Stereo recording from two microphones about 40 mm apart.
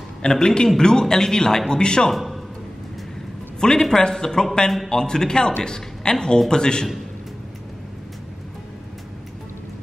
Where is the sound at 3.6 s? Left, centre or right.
Centre.